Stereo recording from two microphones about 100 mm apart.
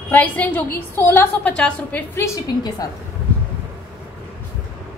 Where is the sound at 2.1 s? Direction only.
30° left (ahead or behind).